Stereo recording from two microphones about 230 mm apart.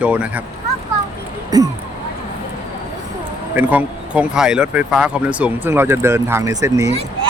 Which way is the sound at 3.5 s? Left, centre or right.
Centre.